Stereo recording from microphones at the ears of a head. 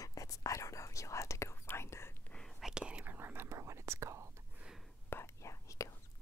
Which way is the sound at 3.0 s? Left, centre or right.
Right.